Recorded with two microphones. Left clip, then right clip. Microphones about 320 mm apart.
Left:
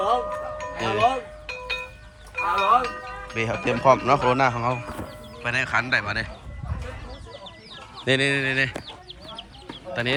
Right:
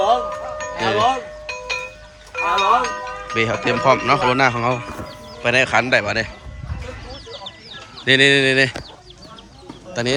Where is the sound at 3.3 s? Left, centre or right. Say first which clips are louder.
Right 6 dB; centre.